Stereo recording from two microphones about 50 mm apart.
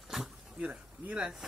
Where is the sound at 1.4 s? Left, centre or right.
Centre.